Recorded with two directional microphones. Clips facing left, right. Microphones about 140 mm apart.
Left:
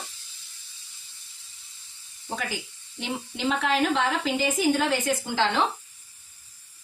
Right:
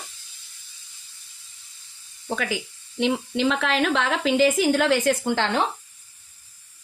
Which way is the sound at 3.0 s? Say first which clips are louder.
Right 9 dB; 90° right.